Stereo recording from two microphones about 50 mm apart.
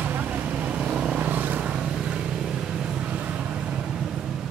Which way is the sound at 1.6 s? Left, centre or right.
Centre.